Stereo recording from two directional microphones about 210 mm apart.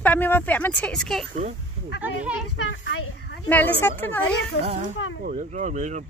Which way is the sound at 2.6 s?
60° left (ahead or behind).